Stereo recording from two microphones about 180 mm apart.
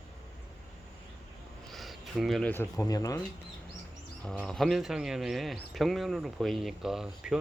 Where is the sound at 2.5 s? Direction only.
15° left (ahead or behind).